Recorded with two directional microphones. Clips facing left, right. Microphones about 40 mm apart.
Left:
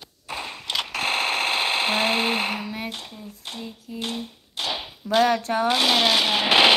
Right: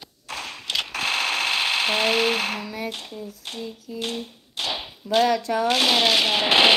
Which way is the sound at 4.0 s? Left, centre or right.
Centre.